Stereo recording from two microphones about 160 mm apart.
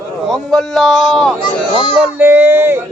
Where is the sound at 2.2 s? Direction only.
15° right (ahead or behind).